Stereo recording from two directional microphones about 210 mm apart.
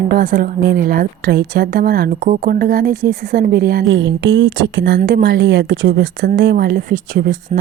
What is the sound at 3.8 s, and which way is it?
A woman's voice, 60° right (ahead or behind).